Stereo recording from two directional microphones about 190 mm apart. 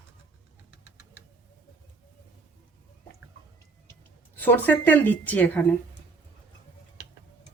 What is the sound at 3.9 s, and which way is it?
Speech, 10° left (ahead or behind).